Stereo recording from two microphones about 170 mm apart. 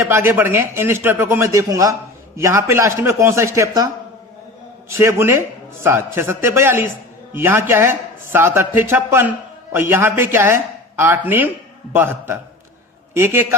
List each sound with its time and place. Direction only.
0.0 s speech: 15° right (ahead or behind)
4.9 s speech: 15° right (ahead or behind)